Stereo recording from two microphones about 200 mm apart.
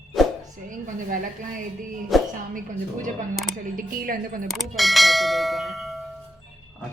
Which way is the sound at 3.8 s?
45° right (ahead or behind).